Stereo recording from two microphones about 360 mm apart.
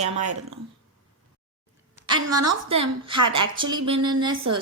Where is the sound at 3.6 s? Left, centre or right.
Right.